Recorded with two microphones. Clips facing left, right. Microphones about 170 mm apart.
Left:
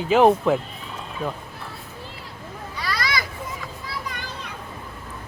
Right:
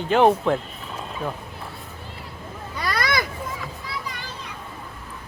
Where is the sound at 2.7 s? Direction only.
55° right (ahead or behind).